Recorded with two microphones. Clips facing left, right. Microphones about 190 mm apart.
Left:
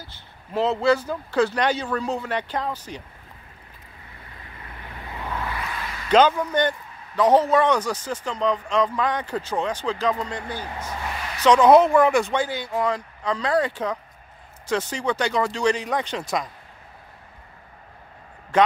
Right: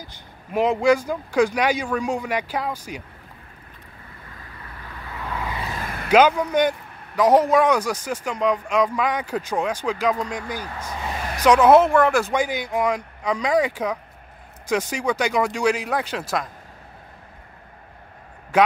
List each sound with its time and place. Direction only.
0.0 s a man's voice: 15° right (ahead or behind)
5.8 s a sound: 50° right (ahead or behind)
6.0 s a man's voice: 10° right (ahead or behind)
10.8 s a sound: 15° right (ahead or behind)
11.4 s speech: 5° right (ahead or behind)
12.4 s a man's voice: 15° right (ahead or behind)
18.5 s a man's voice: 10° right (ahead or behind)